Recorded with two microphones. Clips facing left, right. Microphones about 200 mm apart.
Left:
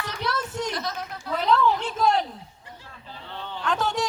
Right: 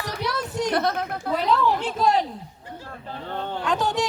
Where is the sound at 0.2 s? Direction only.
15° right (ahead or behind).